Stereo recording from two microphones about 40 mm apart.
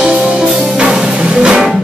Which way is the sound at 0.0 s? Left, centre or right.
Centre.